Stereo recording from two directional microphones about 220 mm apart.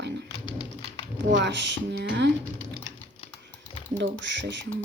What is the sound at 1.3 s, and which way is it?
Speech, 55° right (ahead or behind).